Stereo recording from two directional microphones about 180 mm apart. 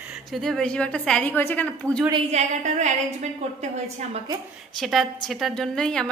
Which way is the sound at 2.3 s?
40° right (ahead or behind).